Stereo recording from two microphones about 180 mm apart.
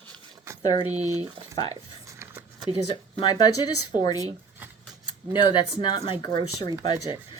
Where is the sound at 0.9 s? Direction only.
35° right (ahead or behind).